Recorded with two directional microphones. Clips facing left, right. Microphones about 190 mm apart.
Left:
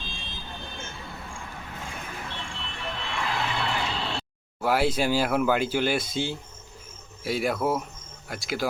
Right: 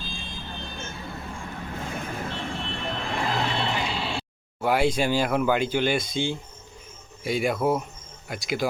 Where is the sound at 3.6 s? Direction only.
15° right (ahead or behind).